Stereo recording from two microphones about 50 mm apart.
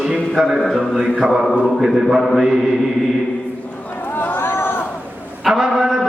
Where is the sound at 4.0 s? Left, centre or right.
Left.